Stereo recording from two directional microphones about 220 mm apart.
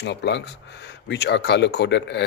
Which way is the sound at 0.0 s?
50° left (ahead or behind).